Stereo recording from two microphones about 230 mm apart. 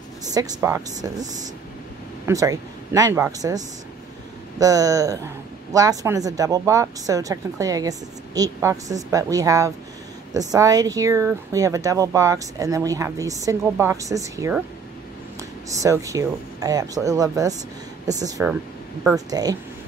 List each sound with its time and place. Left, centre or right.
0.3 s speech: centre
2.2 s speech: centre
15.8 s speech: centre